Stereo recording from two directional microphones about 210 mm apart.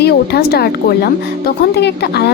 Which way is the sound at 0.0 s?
50° left (ahead or behind).